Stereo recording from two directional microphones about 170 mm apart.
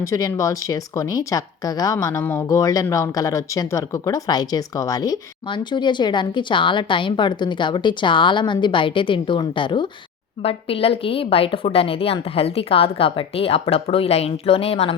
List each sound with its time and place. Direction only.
0.0 s a woman's voice: 20° left (ahead or behind); by 14.9 s 35° left (ahead or behind)